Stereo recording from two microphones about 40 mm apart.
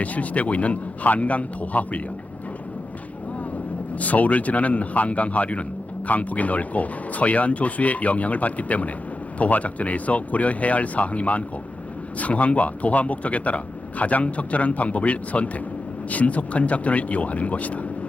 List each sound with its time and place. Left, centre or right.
0.0 s speech: left
3.9 s speech: left